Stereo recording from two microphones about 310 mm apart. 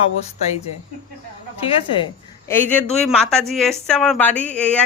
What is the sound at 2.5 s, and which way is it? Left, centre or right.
A woman's voice, centre.